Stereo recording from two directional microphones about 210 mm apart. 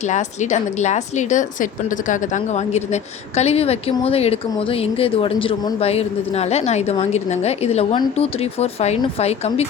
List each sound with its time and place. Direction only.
0.1 s a woman's voice: 35° left (ahead or behind)